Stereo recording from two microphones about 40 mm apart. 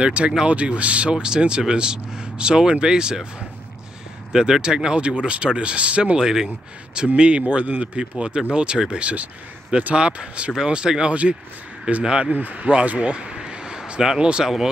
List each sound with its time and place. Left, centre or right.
0.0 s speech: right
1.1 s speech: centre
4.3 s speech: centre; by 6.1 s right
6.1 s speech: centre
7.2 s speech: right
10.5 s speech: centre
12.3 s speech: right
13.1 s a sound: right
14.0 s speech: centre